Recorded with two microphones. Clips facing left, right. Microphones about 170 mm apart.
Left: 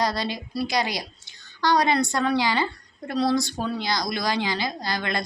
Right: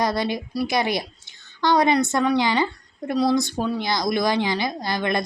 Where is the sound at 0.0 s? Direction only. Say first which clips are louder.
Right 3 dB; 20° right (ahead or behind).